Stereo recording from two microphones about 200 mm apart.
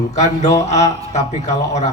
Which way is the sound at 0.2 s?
15° left (ahead or behind).